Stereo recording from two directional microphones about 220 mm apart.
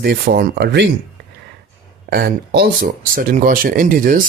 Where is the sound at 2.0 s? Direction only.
45° right (ahead or behind).